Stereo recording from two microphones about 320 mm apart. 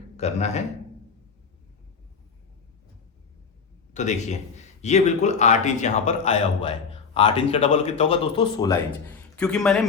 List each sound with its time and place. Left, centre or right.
0.2 s a man's voice: left
3.9 s a man's voice: left; by 9.8 s centre